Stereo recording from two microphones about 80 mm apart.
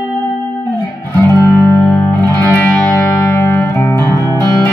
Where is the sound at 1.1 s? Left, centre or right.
Left.